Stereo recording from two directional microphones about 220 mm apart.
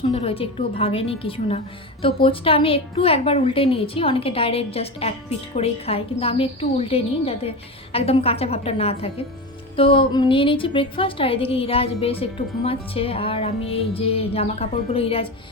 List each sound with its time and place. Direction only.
0.1 s a woman's voice: 25° left (ahead or behind)